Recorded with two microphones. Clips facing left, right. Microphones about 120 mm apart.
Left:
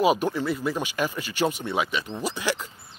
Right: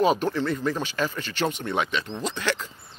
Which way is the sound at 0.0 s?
10° left (ahead or behind).